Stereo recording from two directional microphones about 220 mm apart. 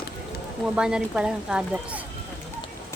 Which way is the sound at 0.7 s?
5° right (ahead or behind).